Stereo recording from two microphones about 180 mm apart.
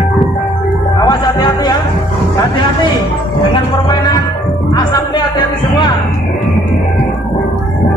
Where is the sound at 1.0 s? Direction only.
25° left (ahead or behind).